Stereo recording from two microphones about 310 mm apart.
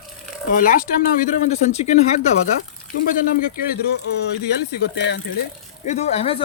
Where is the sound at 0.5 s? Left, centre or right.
Left.